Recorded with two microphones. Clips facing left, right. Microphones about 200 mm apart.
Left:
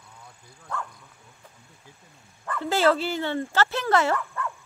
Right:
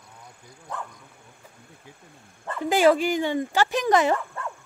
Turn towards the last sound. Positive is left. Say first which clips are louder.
# left 1 dB
turn(degrees=-30)  # may be behind; listen again after turning